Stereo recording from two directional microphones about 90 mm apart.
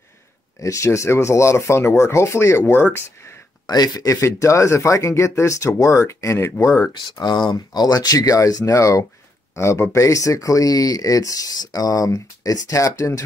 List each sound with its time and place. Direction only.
0.6 s speech: 35° left (ahead or behind)
3.6 s speech: 50° left (ahead or behind); by 6.9 s 35° left (ahead or behind)
7.0 s speech: 55° left (ahead or behind); by 13.2 s 35° left (ahead or behind)